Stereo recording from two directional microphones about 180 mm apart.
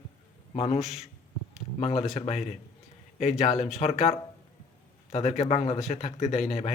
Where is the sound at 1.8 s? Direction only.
35° left (ahead or behind).